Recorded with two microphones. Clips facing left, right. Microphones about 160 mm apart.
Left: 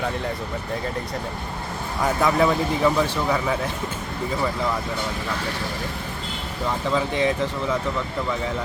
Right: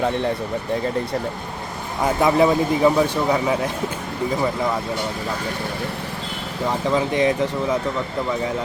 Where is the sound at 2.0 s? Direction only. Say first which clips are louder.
Right 3 dB; 20° right (ahead or behind).